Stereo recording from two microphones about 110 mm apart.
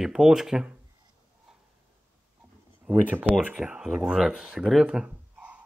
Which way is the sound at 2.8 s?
15° right (ahead or behind).